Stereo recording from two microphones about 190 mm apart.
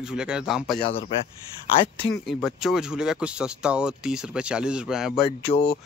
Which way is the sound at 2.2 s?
Centre (ahead or behind).